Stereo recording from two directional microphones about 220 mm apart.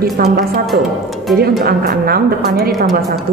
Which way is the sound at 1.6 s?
45° right (ahead or behind).